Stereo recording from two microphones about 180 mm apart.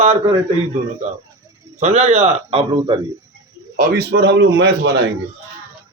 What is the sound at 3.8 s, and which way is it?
A man's voice, 65° right (ahead or behind).